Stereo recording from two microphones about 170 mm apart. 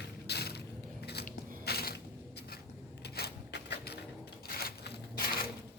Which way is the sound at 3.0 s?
70° left (ahead or behind).